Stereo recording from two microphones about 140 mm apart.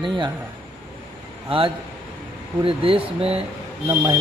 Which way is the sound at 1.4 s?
40° right (ahead or behind).